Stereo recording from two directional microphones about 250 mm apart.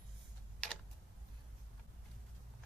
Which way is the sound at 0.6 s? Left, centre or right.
Centre.